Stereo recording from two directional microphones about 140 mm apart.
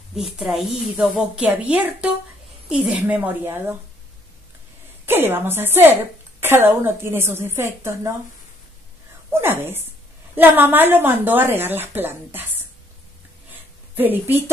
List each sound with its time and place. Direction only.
0.1 s a woman's voice: centre (ahead or behind)
5.0 s a woman's voice: 15° right (ahead or behind)
9.3 s a woman's voice: 15° right (ahead or behind)
13.9 s a woman's voice: 15° right (ahead or behind)